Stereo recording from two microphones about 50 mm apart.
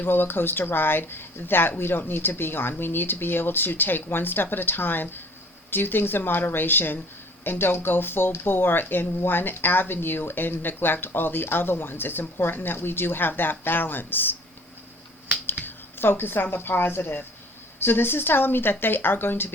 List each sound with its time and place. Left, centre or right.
0.0 s speech: left
15.6 s speech: left